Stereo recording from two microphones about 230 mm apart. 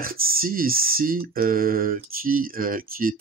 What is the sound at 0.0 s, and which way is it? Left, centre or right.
Speech, right.